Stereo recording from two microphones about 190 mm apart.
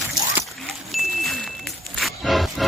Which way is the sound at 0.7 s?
Centre (ahead or behind).